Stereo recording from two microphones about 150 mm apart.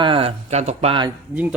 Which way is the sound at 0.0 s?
35° right (ahead or behind).